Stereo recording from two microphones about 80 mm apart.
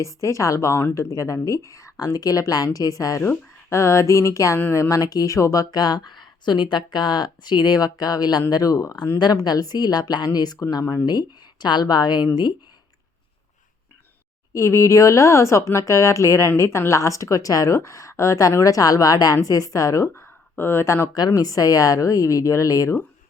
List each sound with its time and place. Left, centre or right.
0.0 s a woman's voice: left
3.2 s a woman's voice: left
9.1 s speech: left
11.0 s speech: left
14.5 s a woman's voice: left
21.1 s a woman's voice: left